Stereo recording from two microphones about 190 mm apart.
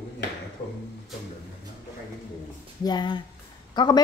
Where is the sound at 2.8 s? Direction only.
20° left (ahead or behind).